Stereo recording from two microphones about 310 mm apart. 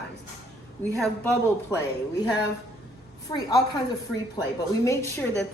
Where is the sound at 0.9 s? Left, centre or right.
Centre.